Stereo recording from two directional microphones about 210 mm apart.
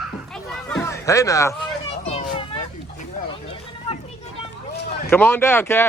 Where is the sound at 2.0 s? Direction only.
30° left (ahead or behind).